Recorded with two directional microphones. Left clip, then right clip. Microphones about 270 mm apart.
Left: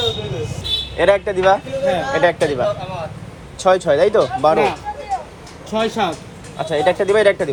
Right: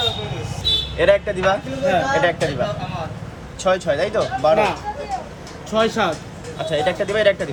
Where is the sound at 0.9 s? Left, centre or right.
Centre.